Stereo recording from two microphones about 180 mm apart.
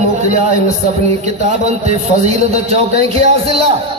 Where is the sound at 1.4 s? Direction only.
40° right (ahead or behind).